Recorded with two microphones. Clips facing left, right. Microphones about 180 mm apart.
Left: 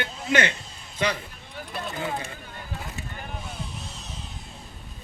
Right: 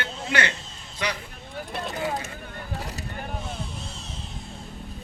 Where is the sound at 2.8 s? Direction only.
40° right (ahead or behind).